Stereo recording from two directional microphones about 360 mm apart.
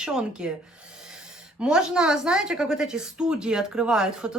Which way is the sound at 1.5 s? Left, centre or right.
Centre.